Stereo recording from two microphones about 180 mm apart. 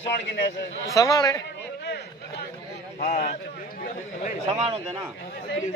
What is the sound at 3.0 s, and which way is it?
Speech, 40° left (ahead or behind).